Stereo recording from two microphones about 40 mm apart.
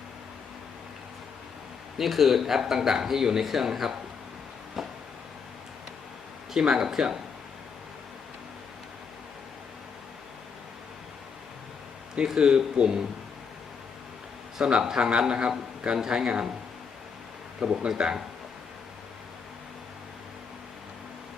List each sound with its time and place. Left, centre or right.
2.0 s speech: centre
4.8 s a sound: centre
6.5 s speech: centre
12.3 s a man's voice: centre
14.6 s a man's voice: centre
17.6 s a man's voice: right